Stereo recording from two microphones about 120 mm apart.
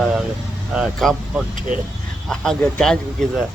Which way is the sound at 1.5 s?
90° right.